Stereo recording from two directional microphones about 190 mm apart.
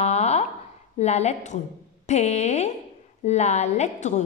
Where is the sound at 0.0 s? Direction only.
35° left (ahead or behind).